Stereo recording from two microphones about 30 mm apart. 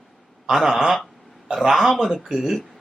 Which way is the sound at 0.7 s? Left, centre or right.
Centre.